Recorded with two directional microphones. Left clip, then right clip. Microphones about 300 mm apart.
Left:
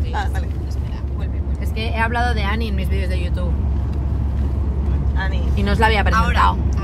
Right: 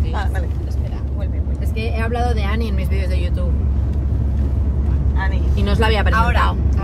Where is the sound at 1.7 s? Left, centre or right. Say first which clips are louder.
Left 3 dB; centre.